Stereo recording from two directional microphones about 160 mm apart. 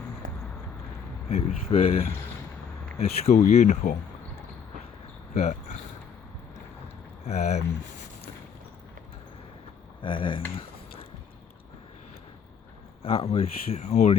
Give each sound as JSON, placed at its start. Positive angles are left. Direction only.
{"t": 1.3, "sound": "speech", "side_deg": 40}
{"t": 5.3, "sound": "speech", "side_deg": 45}
{"t": 7.3, "sound": "speech", "side_deg": 45}
{"t": 10.0, "sound": "speech", "side_deg": 30}
{"t": 13.0, "sound": "speech", "side_deg": 40}